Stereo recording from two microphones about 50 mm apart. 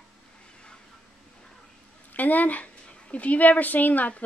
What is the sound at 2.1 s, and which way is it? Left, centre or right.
A woman's voice, left.